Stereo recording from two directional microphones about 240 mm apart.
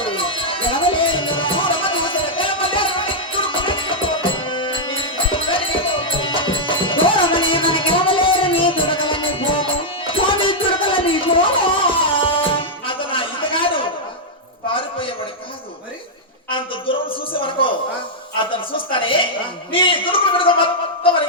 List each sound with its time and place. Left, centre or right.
0.0 s music: left
16.9 s a sound: left
18.9 s speech: left